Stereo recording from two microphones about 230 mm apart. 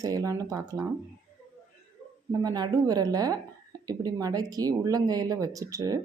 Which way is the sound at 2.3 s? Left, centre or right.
Centre.